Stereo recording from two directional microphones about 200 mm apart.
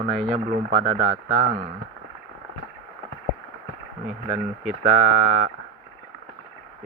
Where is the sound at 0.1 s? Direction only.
Centre (ahead or behind).